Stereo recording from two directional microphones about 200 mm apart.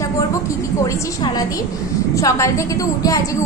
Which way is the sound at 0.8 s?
20° left (ahead or behind).